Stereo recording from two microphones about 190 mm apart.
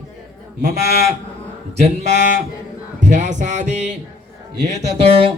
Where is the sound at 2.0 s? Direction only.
40° right (ahead or behind).